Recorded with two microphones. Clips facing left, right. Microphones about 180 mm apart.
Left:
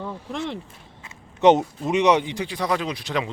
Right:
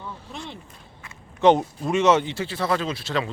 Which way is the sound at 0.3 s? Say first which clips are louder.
Left 8 dB; 85° left.